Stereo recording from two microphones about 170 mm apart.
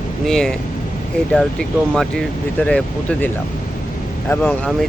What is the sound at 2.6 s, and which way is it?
Speech, 10° left (ahead or behind).